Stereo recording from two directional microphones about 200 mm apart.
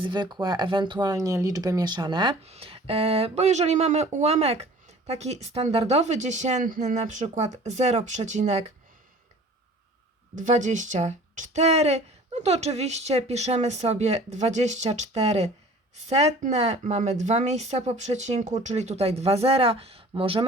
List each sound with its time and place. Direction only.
0.0 s speech: 20° right (ahead or behind)
10.3 s speech: 40° right (ahead or behind)